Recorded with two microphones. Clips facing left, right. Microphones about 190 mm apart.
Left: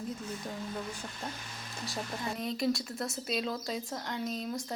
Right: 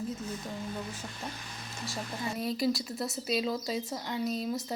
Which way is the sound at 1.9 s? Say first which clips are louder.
Right 1 dB; centre (ahead or behind).